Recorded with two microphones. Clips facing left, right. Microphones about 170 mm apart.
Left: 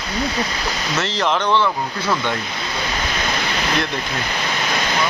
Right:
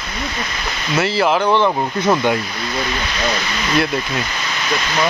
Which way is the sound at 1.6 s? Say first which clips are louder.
Right 5 dB; 25° right (ahead or behind).